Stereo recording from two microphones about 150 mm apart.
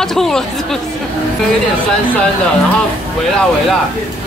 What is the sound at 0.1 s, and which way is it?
Speech, 5° left (ahead or behind).